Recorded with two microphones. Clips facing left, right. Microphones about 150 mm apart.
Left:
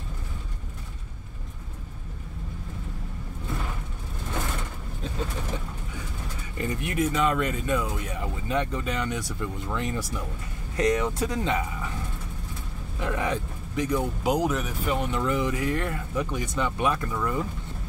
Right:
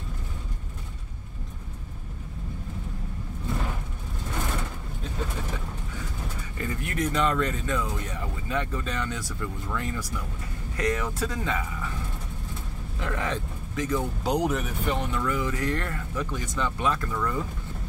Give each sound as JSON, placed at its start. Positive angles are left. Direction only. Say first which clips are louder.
{"t": 6.6, "sound": "a sound", "louder": "left 3 dB", "side_deg": 20}
{"t": 7.0, "sound": "speech", "louder": "left 1 dB", "side_deg": 5}
{"t": 13.0, "sound": "speech", "louder": "left 2 dB", "side_deg": 15}
{"t": 15.0, "sound": "speech", "louder": "left 2 dB", "side_deg": 20}